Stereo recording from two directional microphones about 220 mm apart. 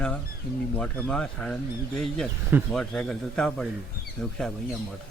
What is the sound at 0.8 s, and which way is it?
Speech, 5° left (ahead or behind).